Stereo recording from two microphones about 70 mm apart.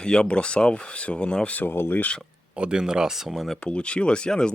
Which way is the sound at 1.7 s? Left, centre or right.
Left.